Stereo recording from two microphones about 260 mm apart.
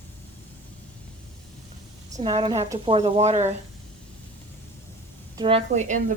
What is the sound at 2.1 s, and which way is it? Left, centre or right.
A woman's voice, centre.